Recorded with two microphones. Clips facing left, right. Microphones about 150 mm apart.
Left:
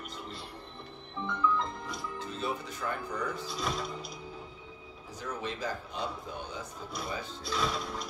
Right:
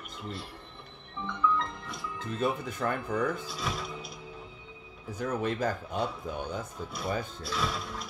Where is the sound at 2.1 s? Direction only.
50° right (ahead or behind).